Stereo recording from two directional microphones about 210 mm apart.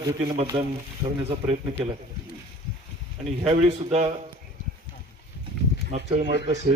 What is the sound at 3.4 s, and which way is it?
Speech, 30° right (ahead or behind).